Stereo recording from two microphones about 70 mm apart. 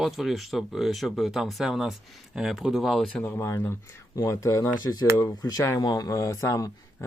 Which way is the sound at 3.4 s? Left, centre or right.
Left.